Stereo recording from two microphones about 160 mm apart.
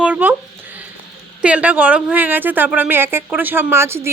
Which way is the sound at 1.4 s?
10° right (ahead or behind).